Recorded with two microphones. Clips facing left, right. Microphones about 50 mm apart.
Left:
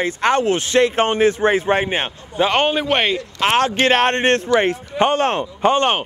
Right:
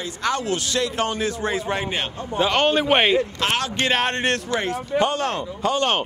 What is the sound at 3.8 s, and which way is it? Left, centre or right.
A man's voice, left.